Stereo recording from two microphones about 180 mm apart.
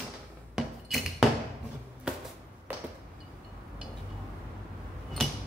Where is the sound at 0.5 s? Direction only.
5° right (ahead or behind).